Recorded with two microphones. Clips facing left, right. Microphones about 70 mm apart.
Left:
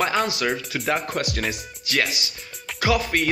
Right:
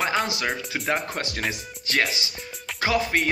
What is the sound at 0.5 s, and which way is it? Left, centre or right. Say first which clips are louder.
Speech: left 2 dB; centre.